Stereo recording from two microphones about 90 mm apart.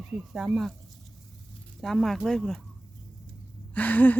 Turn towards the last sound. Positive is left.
turn(degrees=20)  # may be behind; listen again after turning